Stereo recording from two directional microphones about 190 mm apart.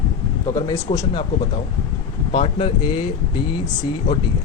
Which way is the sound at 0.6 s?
15° left (ahead or behind).